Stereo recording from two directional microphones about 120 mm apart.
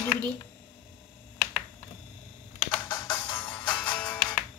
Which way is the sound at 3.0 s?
20° left (ahead or behind).